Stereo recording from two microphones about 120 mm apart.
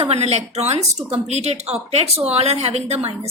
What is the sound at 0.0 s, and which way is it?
A woman's voice, 60° right (ahead or behind).